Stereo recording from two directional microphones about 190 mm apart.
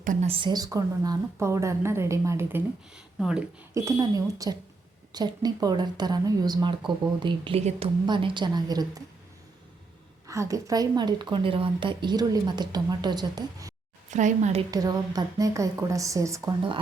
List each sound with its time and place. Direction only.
0.0 s speech: 45° right (ahead or behind)
0.3 s a woman's voice: 25° right (ahead or behind); by 3.4 s 5° right (ahead or behind)
3.8 s a woman's voice: 15° right (ahead or behind)
10.2 s a woman's voice: 15° right (ahead or behind)
14.1 s a woman's voice: 40° right (ahead or behind)
14.7 s a woman's voice: 20° right (ahead or behind)